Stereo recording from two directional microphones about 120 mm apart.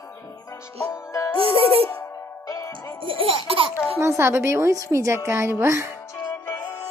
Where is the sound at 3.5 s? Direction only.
50° right (ahead or behind).